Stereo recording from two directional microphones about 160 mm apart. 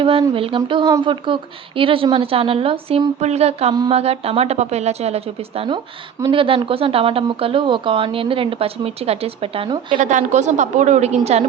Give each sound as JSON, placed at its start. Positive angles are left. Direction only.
{"t": 0.0, "sound": "a woman's voice", "side_deg": -35}
{"t": 10.0, "sound": "a woman's voice", "side_deg": -50}